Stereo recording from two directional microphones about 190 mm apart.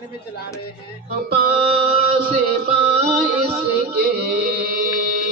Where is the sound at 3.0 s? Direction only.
30° right (ahead or behind).